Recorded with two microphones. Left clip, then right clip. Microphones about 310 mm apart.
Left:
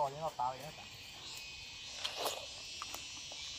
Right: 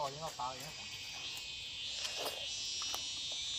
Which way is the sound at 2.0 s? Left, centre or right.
Centre.